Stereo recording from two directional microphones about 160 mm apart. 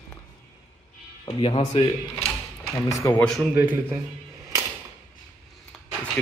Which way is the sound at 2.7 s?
20° left (ahead or behind).